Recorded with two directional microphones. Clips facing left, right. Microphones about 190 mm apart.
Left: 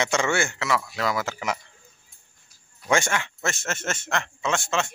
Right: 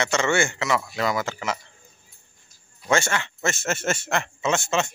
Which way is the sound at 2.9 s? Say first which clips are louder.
Right 1 dB; 10° left (ahead or behind).